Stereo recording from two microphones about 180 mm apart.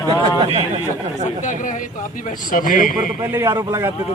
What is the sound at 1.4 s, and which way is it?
A man's voice, 45° left (ahead or behind).